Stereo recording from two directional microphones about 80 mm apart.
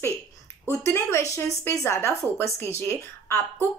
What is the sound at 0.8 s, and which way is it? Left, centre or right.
A woman's voice, left.